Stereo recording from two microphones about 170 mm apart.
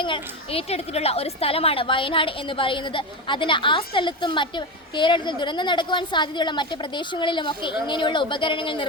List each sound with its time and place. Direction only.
0.0 s a woman's voice: 30° left (ahead or behind)